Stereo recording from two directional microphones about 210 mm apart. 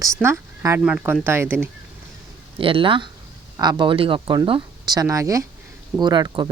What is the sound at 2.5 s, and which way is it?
Speech, 25° right (ahead or behind).